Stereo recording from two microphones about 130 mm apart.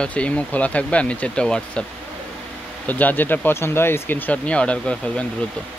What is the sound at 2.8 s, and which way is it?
Speech, 15° left (ahead or behind).